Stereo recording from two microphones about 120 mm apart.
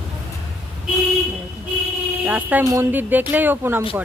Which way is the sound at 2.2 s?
15° right (ahead or behind).